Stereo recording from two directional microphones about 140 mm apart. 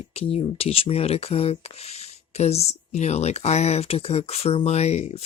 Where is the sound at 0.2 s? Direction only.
45° left (ahead or behind).